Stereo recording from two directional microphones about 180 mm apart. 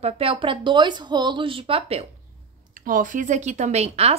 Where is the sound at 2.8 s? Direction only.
50° right (ahead or behind).